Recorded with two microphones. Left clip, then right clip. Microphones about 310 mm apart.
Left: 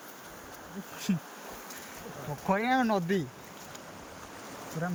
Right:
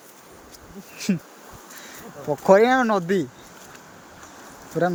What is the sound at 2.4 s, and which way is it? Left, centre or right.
Speech, centre.